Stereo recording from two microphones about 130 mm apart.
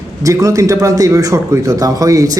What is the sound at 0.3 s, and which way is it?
Speech, 25° right (ahead or behind).